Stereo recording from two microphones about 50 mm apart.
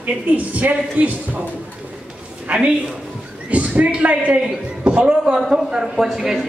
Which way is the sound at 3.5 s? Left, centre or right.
Right.